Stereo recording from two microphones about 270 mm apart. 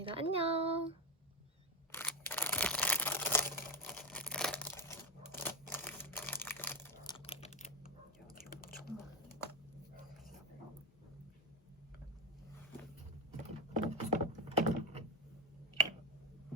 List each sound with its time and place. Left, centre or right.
0.0 s speech: centre
1.9 s single-lens reflex camera: centre
5.3 s a sound: centre
7.1 s computer keyboard: left
8.4 s whispering: left
13.9 s a sound: right